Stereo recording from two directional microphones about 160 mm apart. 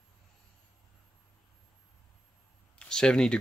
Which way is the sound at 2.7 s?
5° left (ahead or behind).